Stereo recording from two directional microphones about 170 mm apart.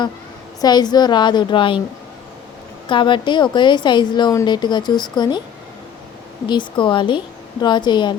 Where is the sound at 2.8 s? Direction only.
30° left (ahead or behind).